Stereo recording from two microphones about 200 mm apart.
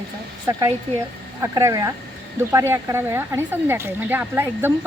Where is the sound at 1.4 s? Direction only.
15° right (ahead or behind).